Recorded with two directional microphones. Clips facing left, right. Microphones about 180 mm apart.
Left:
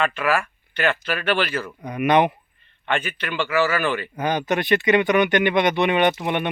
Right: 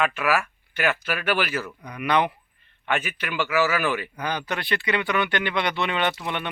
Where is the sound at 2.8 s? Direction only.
5° right (ahead or behind).